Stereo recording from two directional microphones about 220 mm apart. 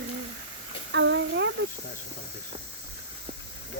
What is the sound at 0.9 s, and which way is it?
Speech, 55° right (ahead or behind).